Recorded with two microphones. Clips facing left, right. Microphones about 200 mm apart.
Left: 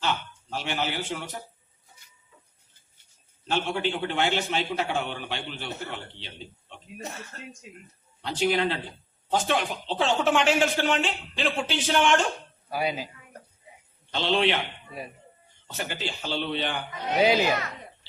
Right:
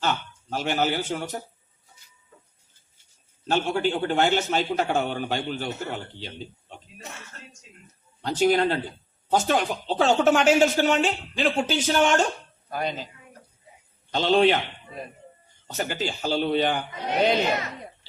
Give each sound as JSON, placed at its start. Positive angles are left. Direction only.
{"t": 0.0, "sound": "speech", "side_deg": -45}
{"t": 3.5, "sound": "speech", "side_deg": -45}
{"t": 8.2, "sound": "speech", "side_deg": -45}
{"t": 12.7, "sound": "speech", "side_deg": 5}
{"t": 14.1, "sound": "speech", "side_deg": -45}
{"t": 15.6, "sound": "speech", "side_deg": -40}
{"t": 17.2, "sound": "speech", "side_deg": 5}